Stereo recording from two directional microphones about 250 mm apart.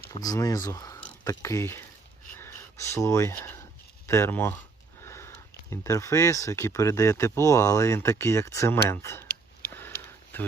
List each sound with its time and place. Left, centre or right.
0.1 s speech: centre
5.0 s sniff: centre
5.7 s speech: centre
9.2 s sniff: left
10.3 s speech: centre